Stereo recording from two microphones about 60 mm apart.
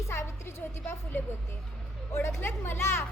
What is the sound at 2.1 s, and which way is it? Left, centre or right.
Speech, left.